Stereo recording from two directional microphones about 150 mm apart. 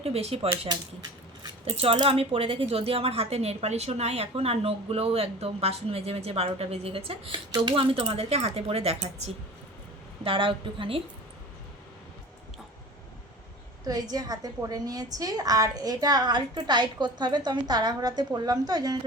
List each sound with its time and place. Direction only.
0.0 s speech: 40° right (ahead or behind)
1.6 s speech: 40° right (ahead or behind)
13.8 s a woman's voice: 25° right (ahead or behind)